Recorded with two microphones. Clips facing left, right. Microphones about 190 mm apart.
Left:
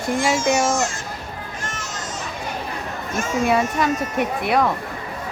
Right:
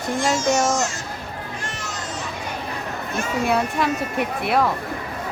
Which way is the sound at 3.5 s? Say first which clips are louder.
Left 2 dB; centre (ahead or behind).